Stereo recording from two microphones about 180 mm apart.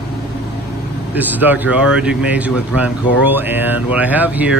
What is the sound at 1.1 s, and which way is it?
Speech, 10° right (ahead or behind).